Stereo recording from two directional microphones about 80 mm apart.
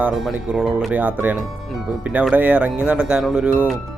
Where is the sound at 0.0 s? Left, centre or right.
Centre.